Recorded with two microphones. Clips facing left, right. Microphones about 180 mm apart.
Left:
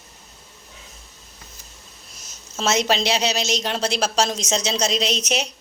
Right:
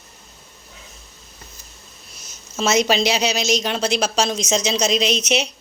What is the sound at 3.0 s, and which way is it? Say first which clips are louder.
A woman's voice: right 2 dB; 30° left (ahead or behind).